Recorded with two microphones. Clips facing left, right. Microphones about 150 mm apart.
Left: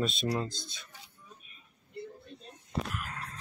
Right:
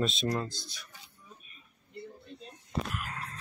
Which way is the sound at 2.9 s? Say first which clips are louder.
Right 1 dB; 5° right (ahead or behind).